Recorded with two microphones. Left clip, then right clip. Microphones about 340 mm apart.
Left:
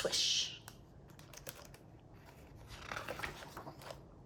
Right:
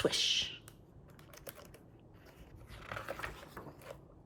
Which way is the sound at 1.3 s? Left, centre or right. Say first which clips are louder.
Right 1 dB; centre.